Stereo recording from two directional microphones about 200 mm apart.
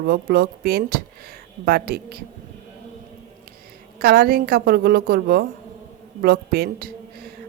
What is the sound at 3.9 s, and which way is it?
A woman's voice, 45° right (ahead or behind).